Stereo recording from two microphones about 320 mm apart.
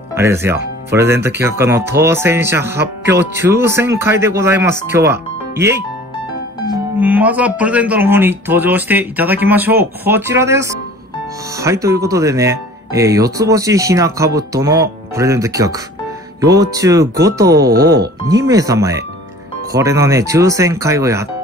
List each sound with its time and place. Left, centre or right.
0.1 s speech: centre
7.0 s speech: centre
17.7 s speech: right
18.3 s speech: centre